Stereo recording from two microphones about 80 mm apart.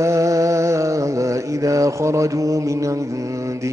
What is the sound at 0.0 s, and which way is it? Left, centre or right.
Mantra, right.